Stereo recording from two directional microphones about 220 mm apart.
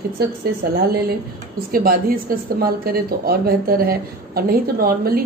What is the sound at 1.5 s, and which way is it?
A woman's voice, 40° right (ahead or behind).